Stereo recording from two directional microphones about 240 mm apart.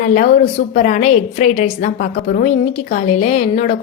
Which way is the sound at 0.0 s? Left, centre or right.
Left.